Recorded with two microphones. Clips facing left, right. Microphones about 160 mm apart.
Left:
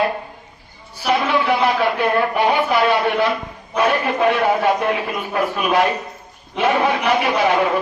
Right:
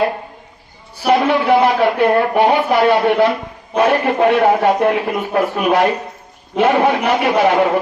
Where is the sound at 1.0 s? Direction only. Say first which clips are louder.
Right 4 dB; 55° right (ahead or behind).